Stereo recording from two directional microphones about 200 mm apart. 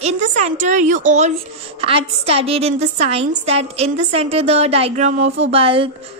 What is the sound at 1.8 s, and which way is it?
Speech, 30° right (ahead or behind).